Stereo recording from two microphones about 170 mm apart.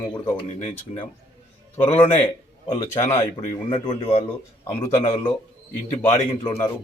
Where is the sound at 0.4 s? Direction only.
35° left (ahead or behind).